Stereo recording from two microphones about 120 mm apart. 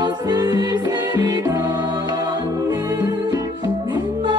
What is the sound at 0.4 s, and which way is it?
Music, 35° right (ahead or behind).